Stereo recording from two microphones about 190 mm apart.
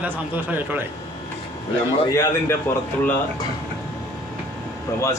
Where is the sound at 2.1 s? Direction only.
15° left (ahead or behind).